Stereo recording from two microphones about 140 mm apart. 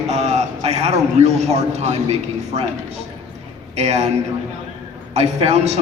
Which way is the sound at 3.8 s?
50° right (ahead or behind).